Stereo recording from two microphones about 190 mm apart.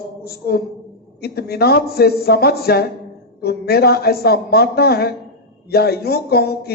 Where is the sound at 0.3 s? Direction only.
55° left (ahead or behind).